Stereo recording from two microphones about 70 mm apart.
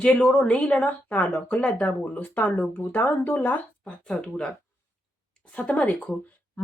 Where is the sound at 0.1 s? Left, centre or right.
Centre.